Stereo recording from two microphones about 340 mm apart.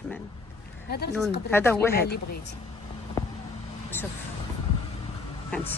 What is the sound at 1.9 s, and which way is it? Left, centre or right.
Speech, left.